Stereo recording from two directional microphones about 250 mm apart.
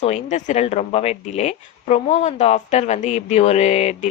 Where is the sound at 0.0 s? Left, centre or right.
Left.